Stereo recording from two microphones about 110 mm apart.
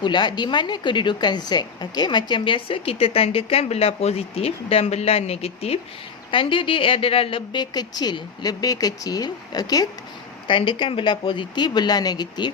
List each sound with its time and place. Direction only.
0.0 s a woman's voice: 45° left (ahead or behind); by 5.8 s 65° left (ahead or behind)
6.3 s speech: 50° left (ahead or behind); by 9.9 s 35° left (ahead or behind)
10.4 s speech: 50° left (ahead or behind)